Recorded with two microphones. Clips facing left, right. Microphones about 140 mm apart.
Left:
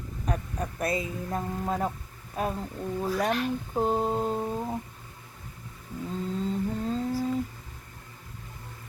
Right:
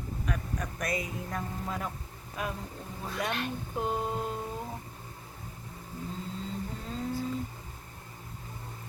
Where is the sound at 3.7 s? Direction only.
40° left (ahead or behind).